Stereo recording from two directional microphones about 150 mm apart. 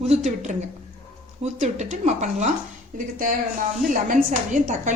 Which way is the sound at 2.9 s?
65° right (ahead or behind).